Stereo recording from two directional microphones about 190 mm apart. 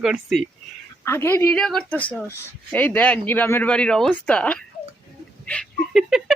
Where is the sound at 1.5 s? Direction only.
5° left (ahead or behind).